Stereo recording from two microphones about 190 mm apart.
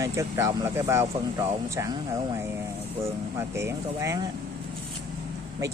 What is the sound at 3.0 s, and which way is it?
Speech, 15° right (ahead or behind).